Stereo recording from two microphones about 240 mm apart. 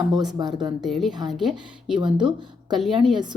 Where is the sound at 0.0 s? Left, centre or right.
Centre.